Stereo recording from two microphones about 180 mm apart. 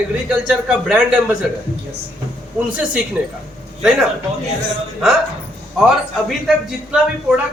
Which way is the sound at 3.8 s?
5° right (ahead or behind).